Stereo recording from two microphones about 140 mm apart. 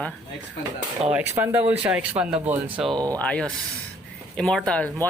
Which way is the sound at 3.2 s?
5° left (ahead or behind).